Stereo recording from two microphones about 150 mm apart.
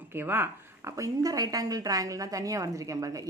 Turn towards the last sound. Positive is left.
turn(degrees=-20)  # may be behind; listen again after turning